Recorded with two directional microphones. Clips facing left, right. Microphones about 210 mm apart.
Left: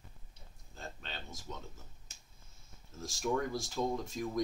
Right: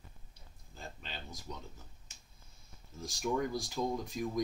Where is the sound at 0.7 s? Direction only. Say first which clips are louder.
Left 1 dB; centre (ahead or behind).